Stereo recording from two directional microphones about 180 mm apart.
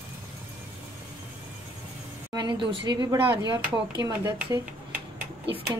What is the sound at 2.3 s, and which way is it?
Speech, 25° right (ahead or behind).